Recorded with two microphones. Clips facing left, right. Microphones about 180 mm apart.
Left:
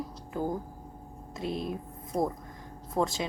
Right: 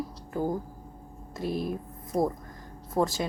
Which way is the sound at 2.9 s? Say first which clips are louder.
Right 2 dB; 5° right (ahead or behind).